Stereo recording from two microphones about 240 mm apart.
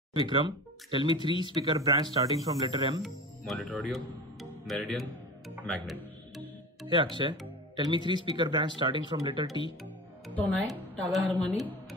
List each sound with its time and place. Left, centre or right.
0.1 s speech: centre
3.0 s speech: centre
5.7 s music: centre
6.9 s speech: centre
10.2 s speech: centre